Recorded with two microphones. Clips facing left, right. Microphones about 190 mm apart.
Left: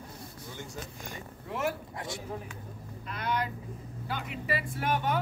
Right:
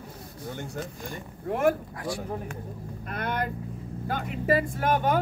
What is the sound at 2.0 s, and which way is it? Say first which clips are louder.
Speech: right 6 dB; 25° left (ahead or behind).